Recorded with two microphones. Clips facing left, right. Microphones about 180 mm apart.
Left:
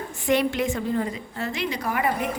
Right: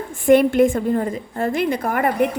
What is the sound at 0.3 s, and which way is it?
A woman's voice, 50° right (ahead or behind).